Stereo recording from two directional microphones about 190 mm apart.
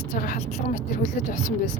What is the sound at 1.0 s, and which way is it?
Speech, 40° left (ahead or behind).